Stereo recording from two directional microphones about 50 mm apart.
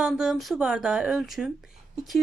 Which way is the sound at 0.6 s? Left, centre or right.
Centre.